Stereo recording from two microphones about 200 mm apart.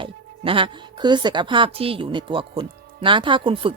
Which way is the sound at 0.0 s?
25° right (ahead or behind).